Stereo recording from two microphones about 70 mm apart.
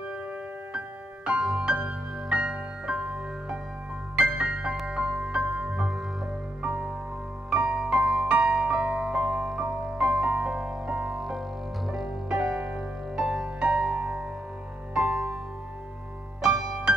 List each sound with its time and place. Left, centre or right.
0.7 s music: centre
4.2 s music: centre
16.3 s music: centre